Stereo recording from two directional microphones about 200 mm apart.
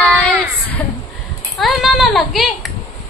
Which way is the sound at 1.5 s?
Centre (ahead or behind).